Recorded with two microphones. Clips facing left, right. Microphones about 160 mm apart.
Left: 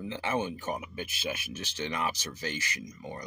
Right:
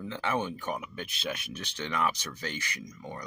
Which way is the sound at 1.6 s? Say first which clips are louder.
Right 3 dB; 60° right (ahead or behind).